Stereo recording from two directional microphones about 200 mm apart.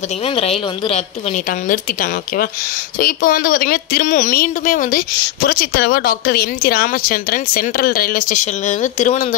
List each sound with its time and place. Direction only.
0.2 s a woman's voice: 30° left (ahead or behind)